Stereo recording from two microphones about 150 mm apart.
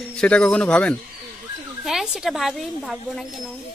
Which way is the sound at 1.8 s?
5° right (ahead or behind).